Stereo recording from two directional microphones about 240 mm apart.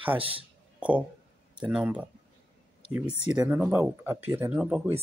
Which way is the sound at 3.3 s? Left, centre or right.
Centre.